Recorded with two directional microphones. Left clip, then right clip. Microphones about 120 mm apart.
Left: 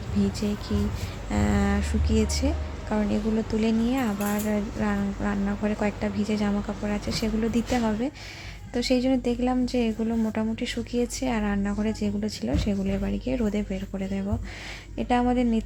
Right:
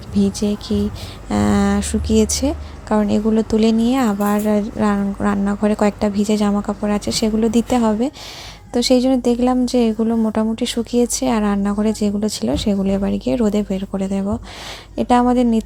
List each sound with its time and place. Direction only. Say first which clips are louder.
0.2 s speech: right 9 dB; 50° right (ahead or behind)